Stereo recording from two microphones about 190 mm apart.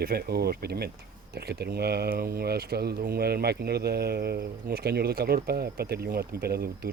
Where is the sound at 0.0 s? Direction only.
55° right (ahead or behind).